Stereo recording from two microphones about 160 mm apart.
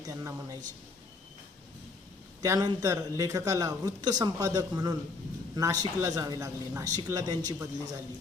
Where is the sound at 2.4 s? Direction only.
25° right (ahead or behind).